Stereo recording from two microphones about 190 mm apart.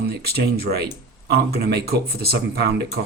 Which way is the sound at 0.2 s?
55° right (ahead or behind).